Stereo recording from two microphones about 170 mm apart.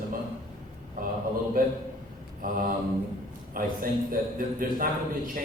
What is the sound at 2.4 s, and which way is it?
Speech, 55° right (ahead or behind).